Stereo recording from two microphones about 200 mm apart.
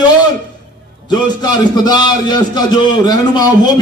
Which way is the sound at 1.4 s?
20° left (ahead or behind).